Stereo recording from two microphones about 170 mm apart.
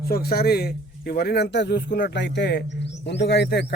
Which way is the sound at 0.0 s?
65° left (ahead or behind).